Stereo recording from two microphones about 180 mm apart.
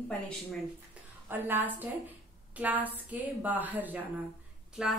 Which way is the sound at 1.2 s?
10° right (ahead or behind).